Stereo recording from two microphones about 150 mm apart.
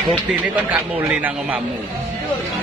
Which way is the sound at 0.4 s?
10° right (ahead or behind).